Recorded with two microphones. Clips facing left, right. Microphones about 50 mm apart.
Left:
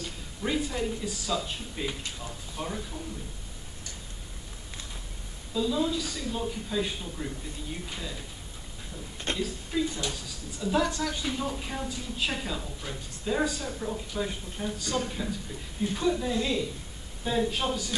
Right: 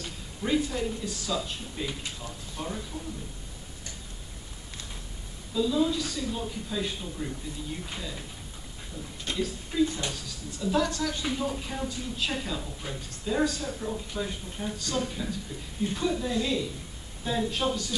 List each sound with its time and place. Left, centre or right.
0.4 s speech: centre
5.5 s speech: centre
9.3 s speech: left
9.7 s speech: centre
11.3 s a woman's voice: centre
12.8 s speech: centre
13.2 s a woman's voice: centre